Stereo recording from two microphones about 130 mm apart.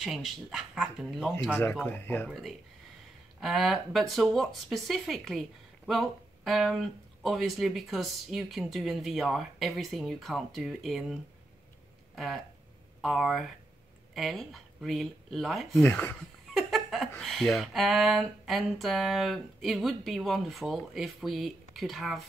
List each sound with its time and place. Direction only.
0.0 s speech: centre (ahead or behind)
1.6 s speech: 15° left (ahead or behind)
3.3 s speech: centre (ahead or behind)
13.0 s speech: centre (ahead or behind)
15.8 s speech: 15° left (ahead or behind)
16.2 s laughter: centre (ahead or behind)
17.2 s speech: centre (ahead or behind)